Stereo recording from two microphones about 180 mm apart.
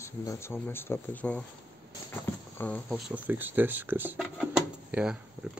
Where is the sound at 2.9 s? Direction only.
10° right (ahead or behind).